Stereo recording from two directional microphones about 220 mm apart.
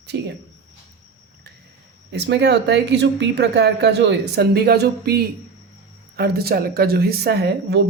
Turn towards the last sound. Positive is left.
turn(degrees=-50)  # may be behind; listen again after turning